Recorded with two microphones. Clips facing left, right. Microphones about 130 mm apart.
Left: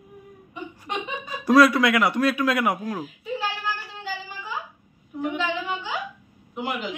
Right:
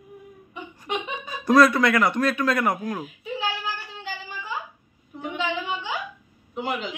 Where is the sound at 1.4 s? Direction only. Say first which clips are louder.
Even; 5° left (ahead or behind).